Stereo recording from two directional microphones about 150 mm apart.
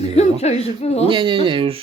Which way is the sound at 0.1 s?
45° left (ahead or behind).